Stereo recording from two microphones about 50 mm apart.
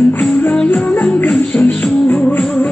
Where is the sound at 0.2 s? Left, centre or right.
Left.